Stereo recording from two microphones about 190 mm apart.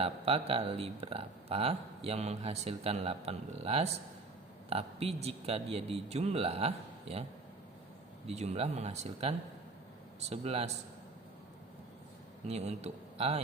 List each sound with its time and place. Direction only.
0.0 s speech: 30° right (ahead or behind)
8.3 s speech: 35° right (ahead or behind)
12.5 s speech: 35° right (ahead or behind)